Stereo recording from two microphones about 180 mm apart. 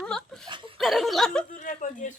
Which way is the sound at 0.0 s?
5° left (ahead or behind).